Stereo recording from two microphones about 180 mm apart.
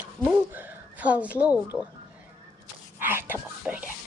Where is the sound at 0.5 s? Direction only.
10° right (ahead or behind).